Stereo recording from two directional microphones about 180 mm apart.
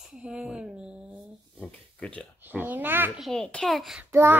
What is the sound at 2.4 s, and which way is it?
Babbling, 10° right (ahead or behind).